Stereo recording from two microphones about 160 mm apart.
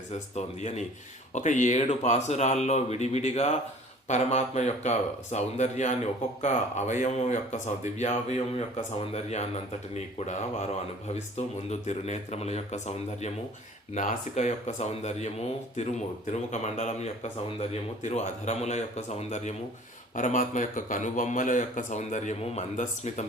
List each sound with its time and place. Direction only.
0.1 s speech: 45° left (ahead or behind)